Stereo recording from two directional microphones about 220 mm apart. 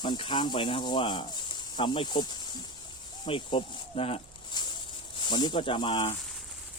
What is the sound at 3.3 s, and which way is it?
Snake, 25° left (ahead or behind).